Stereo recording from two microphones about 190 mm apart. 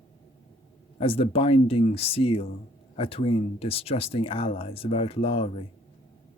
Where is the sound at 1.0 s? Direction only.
30° left (ahead or behind).